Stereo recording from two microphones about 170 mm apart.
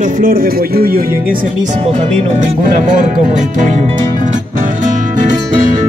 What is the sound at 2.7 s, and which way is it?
Speech, 50° right (ahead or behind).